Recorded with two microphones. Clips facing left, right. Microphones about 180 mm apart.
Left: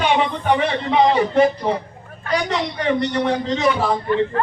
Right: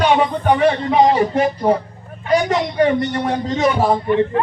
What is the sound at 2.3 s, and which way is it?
A man's voice, 45° right (ahead or behind).